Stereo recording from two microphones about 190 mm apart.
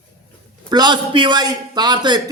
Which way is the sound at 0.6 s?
20° right (ahead or behind).